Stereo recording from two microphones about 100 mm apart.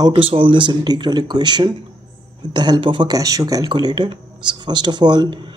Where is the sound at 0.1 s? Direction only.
65° right (ahead or behind).